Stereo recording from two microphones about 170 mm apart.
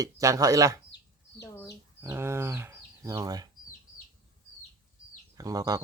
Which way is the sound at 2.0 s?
15° right (ahead or behind).